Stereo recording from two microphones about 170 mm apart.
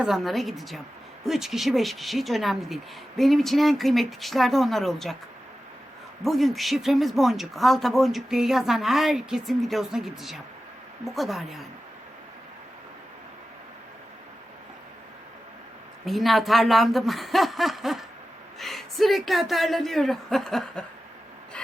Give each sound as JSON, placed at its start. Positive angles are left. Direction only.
{"t": 0.0, "sound": "speech", "side_deg": 0}
{"t": 6.2, "sound": "speech", "side_deg": 0}
{"t": 16.0, "sound": "speech", "side_deg": 0}